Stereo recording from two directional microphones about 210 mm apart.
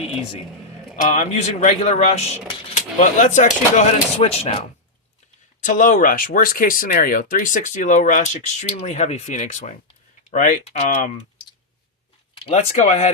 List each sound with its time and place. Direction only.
1.0 s speech: 35° left (ahead or behind)
12.4 s speech: 30° left (ahead or behind)